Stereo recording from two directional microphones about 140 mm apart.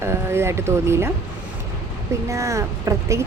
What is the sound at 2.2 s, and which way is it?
Speech, 20° right (ahead or behind).